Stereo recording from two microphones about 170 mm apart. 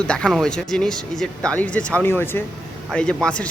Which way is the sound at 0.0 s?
5° left (ahead or behind).